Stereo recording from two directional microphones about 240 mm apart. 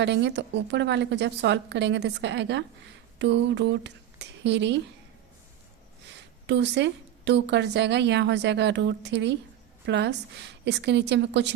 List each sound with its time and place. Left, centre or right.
0.0 s a woman's voice: right
6.5 s a woman's voice: right